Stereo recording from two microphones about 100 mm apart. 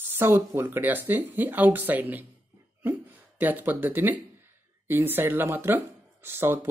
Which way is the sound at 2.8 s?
20° right (ahead or behind).